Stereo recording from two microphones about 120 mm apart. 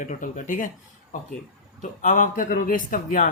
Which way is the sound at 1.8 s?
90° left.